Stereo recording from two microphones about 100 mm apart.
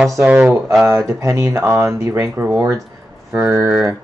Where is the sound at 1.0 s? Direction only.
30° right (ahead or behind).